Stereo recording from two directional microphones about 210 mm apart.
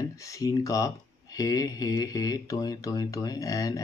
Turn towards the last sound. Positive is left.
turn(degrees=15)  # may be behind; listen again after turning